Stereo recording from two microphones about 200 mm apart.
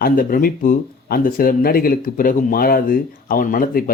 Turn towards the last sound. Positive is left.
turn(degrees=45)  # may be behind; listen again after turning